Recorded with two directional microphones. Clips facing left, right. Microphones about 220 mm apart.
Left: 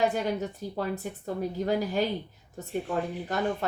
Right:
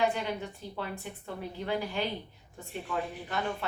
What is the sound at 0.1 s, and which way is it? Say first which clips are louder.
A woman's voice: left 5 dB; 40° left (ahead or behind).